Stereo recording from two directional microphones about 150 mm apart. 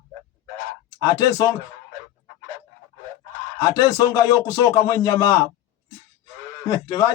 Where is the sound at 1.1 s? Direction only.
25° left (ahead or behind).